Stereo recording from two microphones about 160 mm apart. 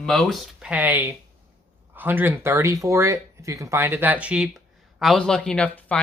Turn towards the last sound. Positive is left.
turn(degrees=10)  # may be behind; listen again after turning